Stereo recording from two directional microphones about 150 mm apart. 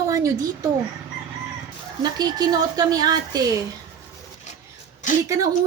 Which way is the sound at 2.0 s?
30° right (ahead or behind).